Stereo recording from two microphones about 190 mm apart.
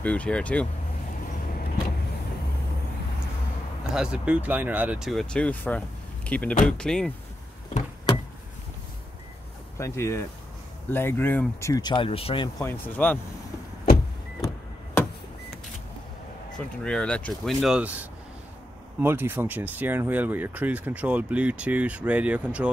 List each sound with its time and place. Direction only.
0.0 s speech: 5° left (ahead or behind)
3.9 s speech: 5° right (ahead or behind)
9.8 s speech: 15° left (ahead or behind); by 12.4 s 30° left (ahead or behind)
12.5 s speech: 10° left (ahead or behind)
16.5 s speech: 5° left (ahead or behind)